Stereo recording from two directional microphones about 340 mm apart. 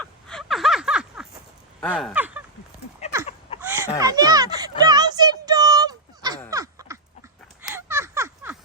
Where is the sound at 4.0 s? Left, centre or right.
Centre.